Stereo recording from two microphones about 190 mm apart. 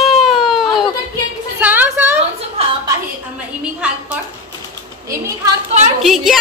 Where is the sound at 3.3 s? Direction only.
5° right (ahead or behind).